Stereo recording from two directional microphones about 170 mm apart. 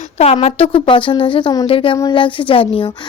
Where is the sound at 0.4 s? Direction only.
35° left (ahead or behind).